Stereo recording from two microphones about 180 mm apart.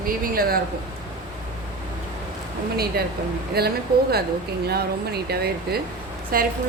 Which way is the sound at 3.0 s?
60° right (ahead or behind).